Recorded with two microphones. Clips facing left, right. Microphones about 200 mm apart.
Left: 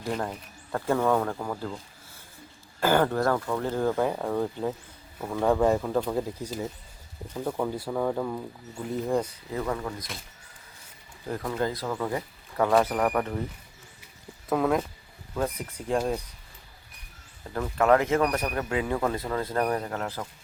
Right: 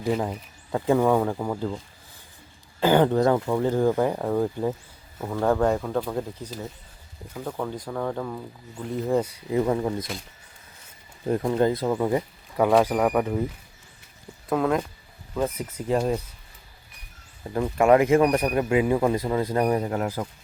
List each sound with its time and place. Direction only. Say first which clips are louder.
0.0 s a man's voice: right 5 dB; 5° right (ahead or behind)
2.8 s a man's voice: right 4 dB; 15° right (ahead or behind)
3.9 s speech: right 3 dB; 5° right (ahead or behind)
9.6 s speech: right 7 dB; 25° right (ahead or behind)
11.3 s a man's voice: right 7 dB; 25° right (ahead or behind); by 13.4 s 10° right (ahead or behind)
14.5 s speech: right 1 dB; centre (ahead or behind)
17.4 s a man's voice: right 4 dB; 15° right (ahead or behind)